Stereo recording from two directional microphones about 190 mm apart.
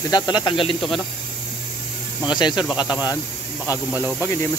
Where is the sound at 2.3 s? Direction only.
25° left (ahead or behind).